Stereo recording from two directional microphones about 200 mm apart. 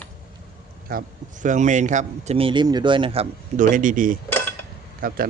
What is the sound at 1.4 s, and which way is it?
A man's voice, 40° right (ahead or behind).